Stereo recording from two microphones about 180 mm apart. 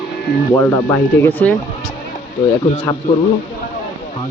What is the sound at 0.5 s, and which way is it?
Speech, 15° left (ahead or behind).